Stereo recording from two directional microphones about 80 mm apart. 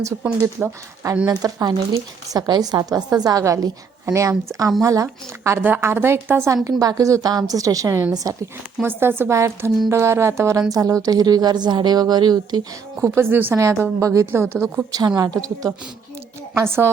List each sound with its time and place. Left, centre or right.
0.4 s speech: right
1.3 s speech: right
5.4 s a woman's voice: right
6.5 s speech: right
8.8 s a woman's voice: right
13.1 s a woman's voice: right
14.0 s speech: right
14.3 s speech: right
14.9 s speech: right
16.6 s speech: right